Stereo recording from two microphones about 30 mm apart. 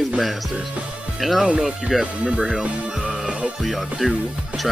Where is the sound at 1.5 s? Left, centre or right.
Centre.